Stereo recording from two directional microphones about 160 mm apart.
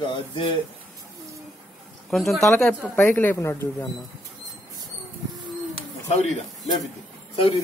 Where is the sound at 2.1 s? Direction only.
Centre (ahead or behind).